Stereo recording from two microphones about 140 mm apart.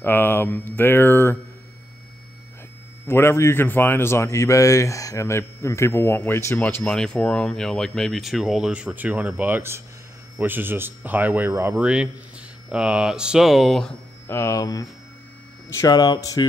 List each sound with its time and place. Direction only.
0.0 s speech: 15° left (ahead or behind)
3.1 s speech: 20° left (ahead or behind); by 13.9 s centre (ahead or behind)
14.2 s speech: 20° left (ahead or behind)